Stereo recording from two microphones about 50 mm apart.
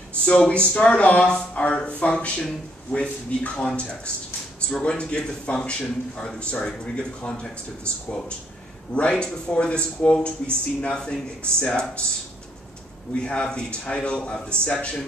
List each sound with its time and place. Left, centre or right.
0.2 s a man's voice: left
1.2 s a sound: centre
1.5 s a man's voice: left
13.1 s a man's voice: left